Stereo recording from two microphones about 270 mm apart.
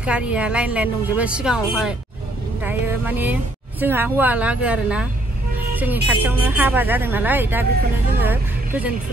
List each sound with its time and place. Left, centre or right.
0.0 s speech: centre